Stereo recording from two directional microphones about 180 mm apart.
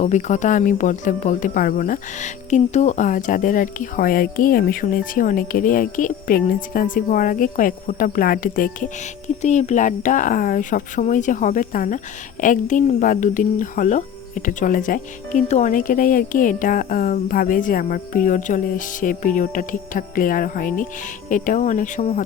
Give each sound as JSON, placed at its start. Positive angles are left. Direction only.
{"t": 0.0, "sound": "speech", "side_deg": 40}